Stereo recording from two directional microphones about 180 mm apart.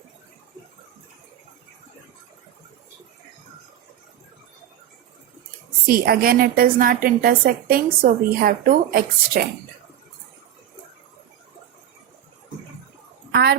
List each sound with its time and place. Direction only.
5.8 s a woman's voice: 55° right (ahead or behind)
13.3 s a woman's voice: 65° right (ahead or behind)